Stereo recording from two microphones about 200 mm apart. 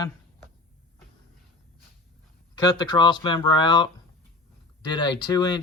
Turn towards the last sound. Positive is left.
turn(degrees=20)  # may be behind; listen again after turning